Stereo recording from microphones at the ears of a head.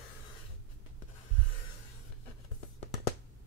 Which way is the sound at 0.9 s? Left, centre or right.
Left.